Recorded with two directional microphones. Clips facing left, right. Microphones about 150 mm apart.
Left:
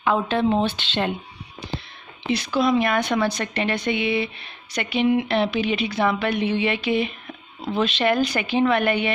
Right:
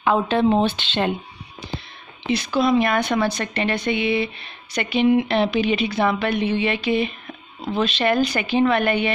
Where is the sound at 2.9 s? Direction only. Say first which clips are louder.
Right 1 dB; 5° right (ahead or behind).